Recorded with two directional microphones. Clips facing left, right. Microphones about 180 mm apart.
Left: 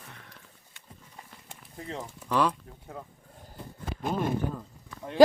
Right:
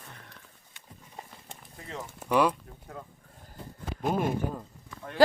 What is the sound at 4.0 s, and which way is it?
Speech, 10° right (ahead or behind).